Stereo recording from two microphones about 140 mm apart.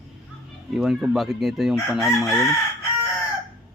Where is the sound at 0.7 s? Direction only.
5° right (ahead or behind).